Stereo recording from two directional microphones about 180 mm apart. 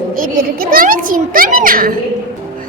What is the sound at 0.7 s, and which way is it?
A child's voice, 50° right (ahead or behind).